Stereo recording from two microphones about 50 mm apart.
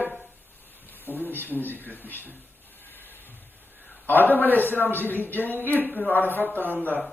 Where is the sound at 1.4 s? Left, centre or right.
Left.